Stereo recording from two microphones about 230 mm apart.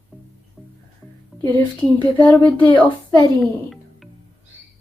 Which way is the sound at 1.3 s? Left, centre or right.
Centre.